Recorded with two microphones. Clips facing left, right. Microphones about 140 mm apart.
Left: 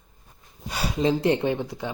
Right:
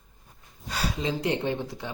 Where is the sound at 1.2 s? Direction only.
20° left (ahead or behind).